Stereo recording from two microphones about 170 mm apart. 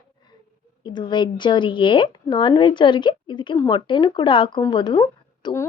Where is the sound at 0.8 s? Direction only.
25° left (ahead or behind).